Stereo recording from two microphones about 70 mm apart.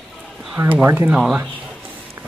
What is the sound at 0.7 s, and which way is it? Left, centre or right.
Speech, right.